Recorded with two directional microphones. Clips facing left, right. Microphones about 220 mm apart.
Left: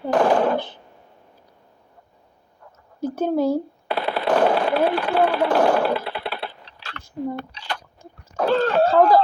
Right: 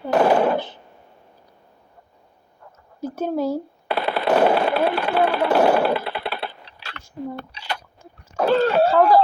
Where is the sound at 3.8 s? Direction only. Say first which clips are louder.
Right 4 dB; 65° right (ahead or behind).